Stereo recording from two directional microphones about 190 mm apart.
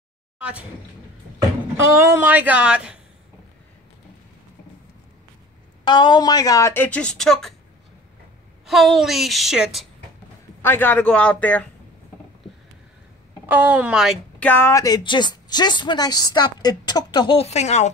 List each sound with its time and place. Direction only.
0.4 s speech: 5° right (ahead or behind)
2.0 s speech: 15° right (ahead or behind)
5.9 s speech: 25° left (ahead or behind); by 7.5 s centre (ahead or behind)
8.6 s a woman's voice: centre (ahead or behind)
10.6 s speech: 10° left (ahead or behind)
13.5 s a woman's voice: 10° right (ahead or behind)
14.5 s a woman's voice: 15° left (ahead or behind); by 17.8 s 35° left (ahead or behind)